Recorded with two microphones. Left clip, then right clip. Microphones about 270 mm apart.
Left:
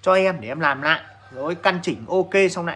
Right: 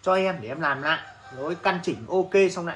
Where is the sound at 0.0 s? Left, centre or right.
Centre.